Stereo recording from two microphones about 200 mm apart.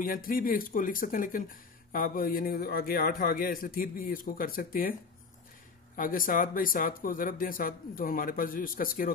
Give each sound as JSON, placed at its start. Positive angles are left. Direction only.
{"t": 0.0, "sound": "speech", "side_deg": 45}
{"t": 5.9, "sound": "speech", "side_deg": 45}